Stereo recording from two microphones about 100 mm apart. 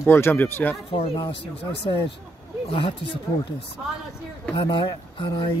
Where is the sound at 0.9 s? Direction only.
70° left (ahead or behind).